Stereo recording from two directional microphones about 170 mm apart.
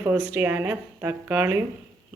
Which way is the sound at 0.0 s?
10° right (ahead or behind).